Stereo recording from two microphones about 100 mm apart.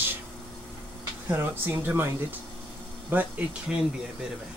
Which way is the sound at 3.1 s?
15° right (ahead or behind).